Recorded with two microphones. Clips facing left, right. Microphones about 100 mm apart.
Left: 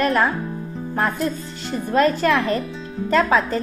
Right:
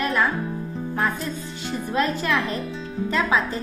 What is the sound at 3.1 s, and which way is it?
Speech, 50° left (ahead or behind).